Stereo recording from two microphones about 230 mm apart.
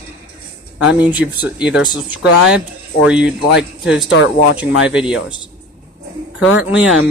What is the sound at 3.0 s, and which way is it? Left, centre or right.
Speech, centre.